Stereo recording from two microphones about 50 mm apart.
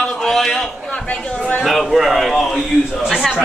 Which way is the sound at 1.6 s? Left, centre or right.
Centre.